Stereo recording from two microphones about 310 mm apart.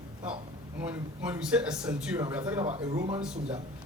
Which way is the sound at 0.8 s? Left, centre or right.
Centre.